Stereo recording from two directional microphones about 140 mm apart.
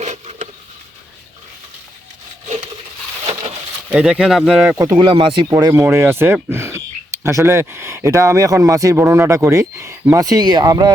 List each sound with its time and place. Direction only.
0.0 s a sound: 55° right (ahead or behind)
3.8 s speech: 5° right (ahead or behind)
4.8 s speech: 25° right (ahead or behind)
5.5 s speech: 25° right (ahead or behind)